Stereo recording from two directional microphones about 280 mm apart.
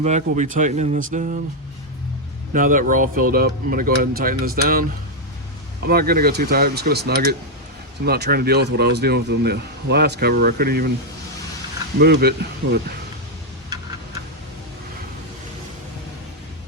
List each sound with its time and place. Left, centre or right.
0.0 s speech: right
2.5 s speech: right
5.9 s speech: right
11.9 s speech: right